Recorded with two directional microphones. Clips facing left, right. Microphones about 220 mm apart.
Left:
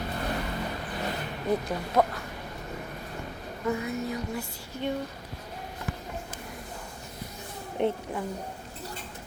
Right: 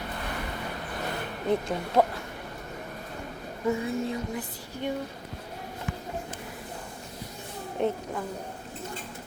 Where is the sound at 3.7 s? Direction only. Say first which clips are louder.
Right 2 dB; 25° right (ahead or behind).